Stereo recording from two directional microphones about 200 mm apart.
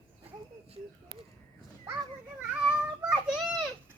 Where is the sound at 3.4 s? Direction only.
Centre (ahead or behind).